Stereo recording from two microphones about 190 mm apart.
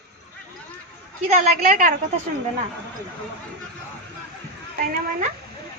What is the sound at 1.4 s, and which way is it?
Speech, 45° right (ahead or behind).